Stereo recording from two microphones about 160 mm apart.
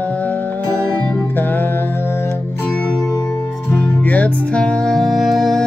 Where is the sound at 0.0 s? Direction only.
10° left (ahead or behind).